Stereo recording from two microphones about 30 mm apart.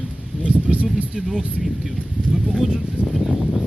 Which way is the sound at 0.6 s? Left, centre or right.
Right.